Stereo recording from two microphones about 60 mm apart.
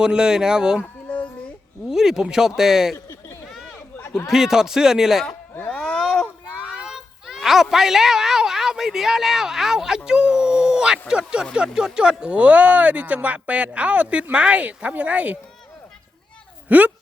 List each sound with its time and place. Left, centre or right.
0.0 s speech: centre
1.9 s speech: centre
2.9 s a sound: left
3.5 s chatter: centre
4.3 s speech: centre
5.6 s a sound: centre
6.6 s a child's voice: centre
16.6 s a woman's voice: right